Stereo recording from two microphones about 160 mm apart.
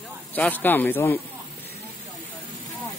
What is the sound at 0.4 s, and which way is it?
Speech, 10° left (ahead or behind).